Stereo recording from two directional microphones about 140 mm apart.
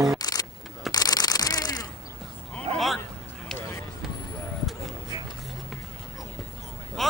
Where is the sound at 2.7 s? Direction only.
Centre (ahead or behind).